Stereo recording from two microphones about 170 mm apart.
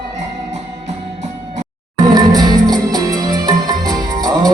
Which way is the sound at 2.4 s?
25° right (ahead or behind).